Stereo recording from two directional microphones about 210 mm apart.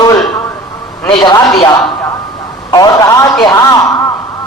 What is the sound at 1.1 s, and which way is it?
A man's voice, 20° left (ahead or behind).